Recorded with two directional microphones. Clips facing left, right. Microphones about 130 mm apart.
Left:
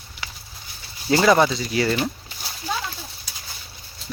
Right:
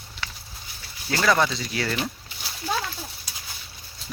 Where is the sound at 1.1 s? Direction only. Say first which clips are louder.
Left 5 dB; 25° left (ahead or behind).